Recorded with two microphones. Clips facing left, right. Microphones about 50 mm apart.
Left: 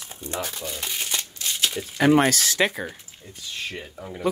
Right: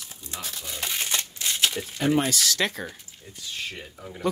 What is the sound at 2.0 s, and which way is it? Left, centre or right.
Speech, left.